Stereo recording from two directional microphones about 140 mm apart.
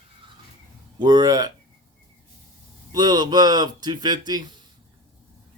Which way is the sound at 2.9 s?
30° right (ahead or behind).